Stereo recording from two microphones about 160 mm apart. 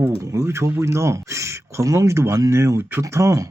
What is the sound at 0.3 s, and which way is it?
Speech, 15° right (ahead or behind).